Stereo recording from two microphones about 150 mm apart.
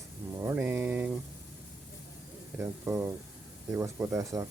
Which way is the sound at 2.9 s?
20° right (ahead or behind).